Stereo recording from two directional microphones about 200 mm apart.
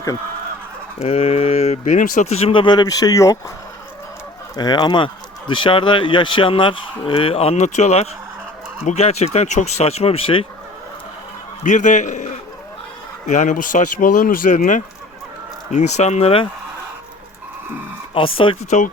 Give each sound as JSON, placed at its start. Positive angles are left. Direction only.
{"t": 0.9, "sound": "speech", "side_deg": 30}
{"t": 4.5, "sound": "speech", "side_deg": 20}
{"t": 11.6, "sound": "a man's voice", "side_deg": 40}
{"t": 18.1, "sound": "speech", "side_deg": 25}